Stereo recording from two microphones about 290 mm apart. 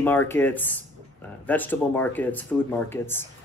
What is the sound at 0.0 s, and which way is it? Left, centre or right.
Speech, centre.